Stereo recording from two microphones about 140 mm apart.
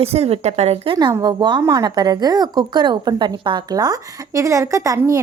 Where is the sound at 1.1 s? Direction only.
25° right (ahead or behind).